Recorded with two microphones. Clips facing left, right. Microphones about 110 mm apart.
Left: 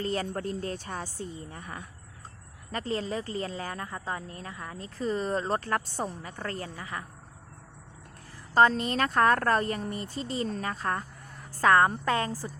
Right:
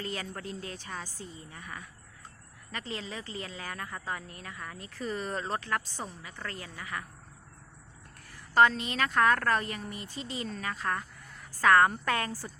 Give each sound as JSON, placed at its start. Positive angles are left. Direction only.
{"t": 0.0, "sound": "a woman's voice", "side_deg": 35}
{"t": 8.5, "sound": "a woman's voice", "side_deg": 35}